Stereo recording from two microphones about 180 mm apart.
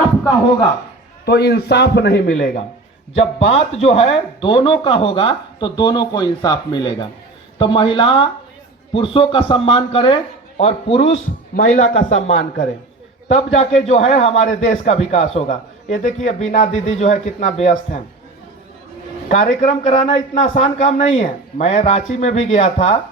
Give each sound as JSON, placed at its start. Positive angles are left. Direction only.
{"t": 1.2, "sound": "a man's voice", "side_deg": 65}
{"t": 3.2, "sound": "a man's voice", "side_deg": 35}
{"t": 11.5, "sound": "a man's voice", "side_deg": 45}
{"t": 19.3, "sound": "a man's voice", "side_deg": 40}